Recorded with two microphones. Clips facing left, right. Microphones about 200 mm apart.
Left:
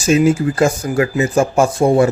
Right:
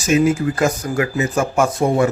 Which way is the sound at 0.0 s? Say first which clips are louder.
Left 3 dB; 30° left (ahead or behind).